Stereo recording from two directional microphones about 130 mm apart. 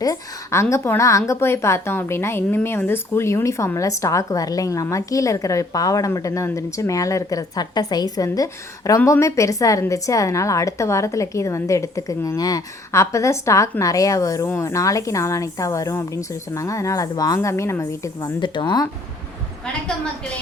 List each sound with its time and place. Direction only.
0.0 s a woman's voice: 25° left (ahead or behind)
18.3 s speech: 35° left (ahead or behind)